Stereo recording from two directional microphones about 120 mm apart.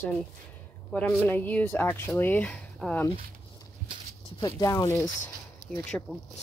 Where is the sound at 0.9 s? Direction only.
15° left (ahead or behind).